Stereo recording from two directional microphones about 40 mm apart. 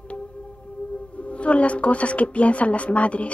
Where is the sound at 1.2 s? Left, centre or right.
Left.